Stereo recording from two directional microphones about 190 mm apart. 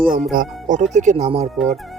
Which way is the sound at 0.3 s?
45° right (ahead or behind).